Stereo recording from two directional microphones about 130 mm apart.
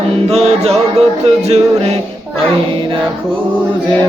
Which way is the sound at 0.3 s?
50° right (ahead or behind).